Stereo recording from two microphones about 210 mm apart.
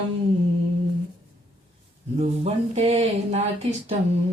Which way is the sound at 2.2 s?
30° right (ahead or behind).